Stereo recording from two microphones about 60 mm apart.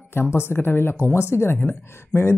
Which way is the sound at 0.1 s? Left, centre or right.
Left.